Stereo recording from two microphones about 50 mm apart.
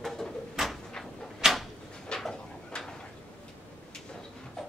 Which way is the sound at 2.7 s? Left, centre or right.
Centre.